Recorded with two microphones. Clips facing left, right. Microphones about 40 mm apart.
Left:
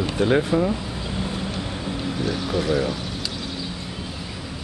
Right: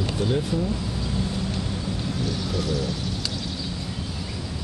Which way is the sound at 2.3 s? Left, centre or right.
Left.